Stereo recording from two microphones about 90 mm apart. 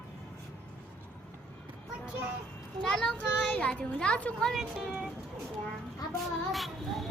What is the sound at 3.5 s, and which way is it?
Speech, 15° left (ahead or behind).